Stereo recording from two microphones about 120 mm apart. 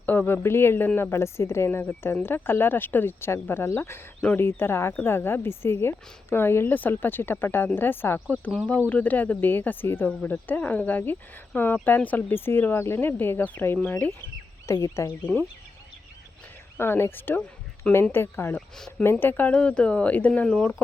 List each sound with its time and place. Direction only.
0.0 s a sound: 15° left (ahead or behind)
0.4 s speech: 20° left (ahead or behind)
14.7 s speech: 25° left (ahead or behind)
16.7 s speech: 20° left (ahead or behind)
18.8 s speech: 5° left (ahead or behind)